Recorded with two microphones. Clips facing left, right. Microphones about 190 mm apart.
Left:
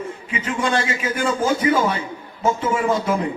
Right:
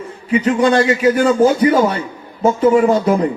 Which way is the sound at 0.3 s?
35° right (ahead or behind).